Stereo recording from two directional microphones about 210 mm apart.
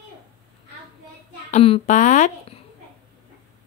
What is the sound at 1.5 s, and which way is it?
Speech, 30° left (ahead or behind).